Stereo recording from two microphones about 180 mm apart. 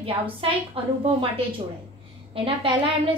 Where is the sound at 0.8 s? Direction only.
30° right (ahead or behind).